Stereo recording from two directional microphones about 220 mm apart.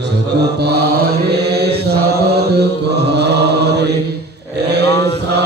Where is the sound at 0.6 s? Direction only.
45° right (ahead or behind).